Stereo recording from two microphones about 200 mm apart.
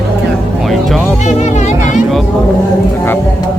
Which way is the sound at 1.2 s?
35° left (ahead or behind).